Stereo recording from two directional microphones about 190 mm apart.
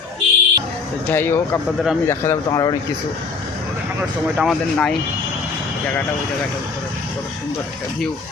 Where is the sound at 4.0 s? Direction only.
Centre (ahead or behind).